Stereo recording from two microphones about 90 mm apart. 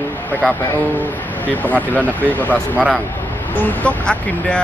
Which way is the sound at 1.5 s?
20° left (ahead or behind).